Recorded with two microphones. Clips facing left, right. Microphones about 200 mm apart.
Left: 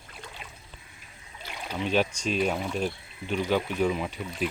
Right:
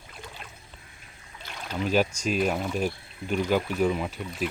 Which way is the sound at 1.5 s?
10° left (ahead or behind).